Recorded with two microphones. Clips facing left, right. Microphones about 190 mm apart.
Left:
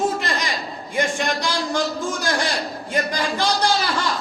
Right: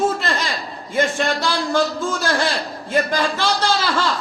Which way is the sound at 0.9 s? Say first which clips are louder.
Right 3 dB; 15° left (ahead or behind).